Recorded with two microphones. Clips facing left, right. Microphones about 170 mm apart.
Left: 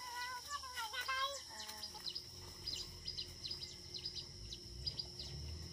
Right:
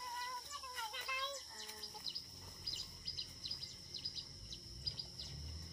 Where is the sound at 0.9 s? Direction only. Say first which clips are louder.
Left 1 dB; 15° right (ahead or behind).